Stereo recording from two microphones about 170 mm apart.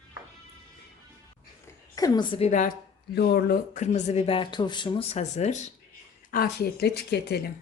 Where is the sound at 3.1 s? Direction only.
65° left (ahead or behind); by 5.7 s 45° left (ahead or behind).